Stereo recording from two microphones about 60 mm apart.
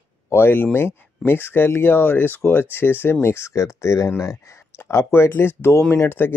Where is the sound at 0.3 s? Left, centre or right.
Left.